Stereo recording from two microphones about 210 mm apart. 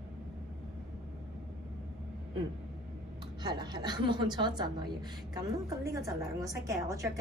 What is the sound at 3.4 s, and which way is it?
A woman's voice, 20° right (ahead or behind).